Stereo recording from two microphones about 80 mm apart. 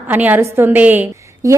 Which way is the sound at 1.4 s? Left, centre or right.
Right.